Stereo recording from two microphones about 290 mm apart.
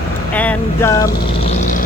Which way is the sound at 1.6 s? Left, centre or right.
Left.